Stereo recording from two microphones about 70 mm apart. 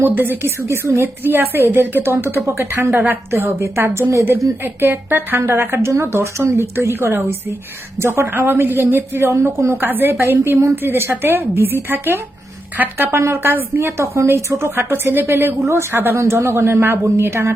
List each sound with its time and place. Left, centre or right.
0.0 s a woman's voice: right
9.3 s speech: right
9.8 s a woman's voice: right